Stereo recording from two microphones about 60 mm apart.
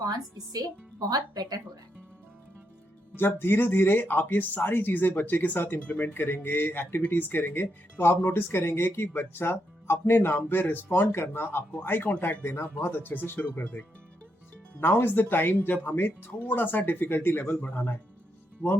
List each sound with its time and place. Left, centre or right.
0.0 s speech: right
3.2 s speech: left